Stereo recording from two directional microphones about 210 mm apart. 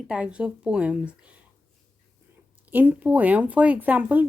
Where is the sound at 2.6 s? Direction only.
10° right (ahead or behind).